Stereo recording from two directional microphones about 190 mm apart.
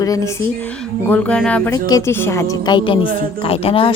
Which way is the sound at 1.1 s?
5° left (ahead or behind).